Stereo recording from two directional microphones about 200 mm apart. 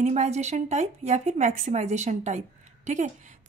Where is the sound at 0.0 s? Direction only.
35° right (ahead or behind).